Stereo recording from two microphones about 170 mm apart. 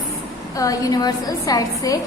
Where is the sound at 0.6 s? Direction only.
20° left (ahead or behind).